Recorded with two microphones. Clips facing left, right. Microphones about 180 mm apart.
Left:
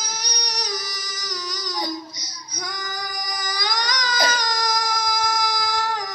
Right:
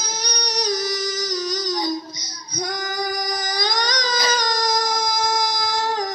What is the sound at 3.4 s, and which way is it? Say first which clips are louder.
Baby cry: right 4 dB; 20° right (ahead or behind).